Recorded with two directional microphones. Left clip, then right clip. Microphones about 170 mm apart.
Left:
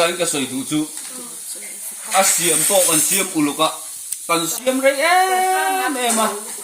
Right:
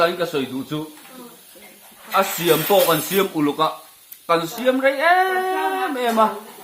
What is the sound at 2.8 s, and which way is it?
Speech, 10° right (ahead or behind).